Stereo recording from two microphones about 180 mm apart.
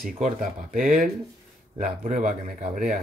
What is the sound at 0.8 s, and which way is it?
Speech, 5° right (ahead or behind).